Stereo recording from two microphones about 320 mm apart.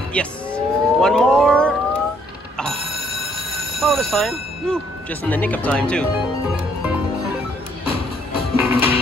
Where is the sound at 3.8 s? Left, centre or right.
Centre.